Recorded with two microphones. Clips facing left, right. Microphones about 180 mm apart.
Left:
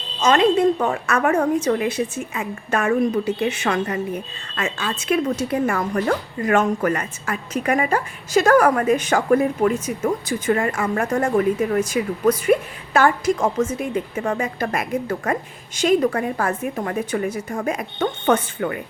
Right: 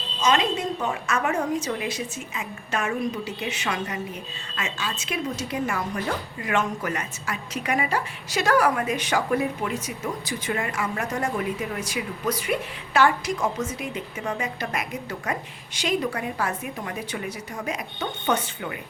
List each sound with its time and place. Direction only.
0.2 s a woman's voice: 50° left (ahead or behind)